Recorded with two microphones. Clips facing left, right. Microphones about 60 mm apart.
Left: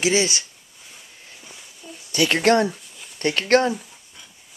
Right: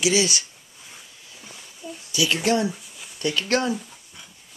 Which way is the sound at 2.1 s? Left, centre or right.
Left.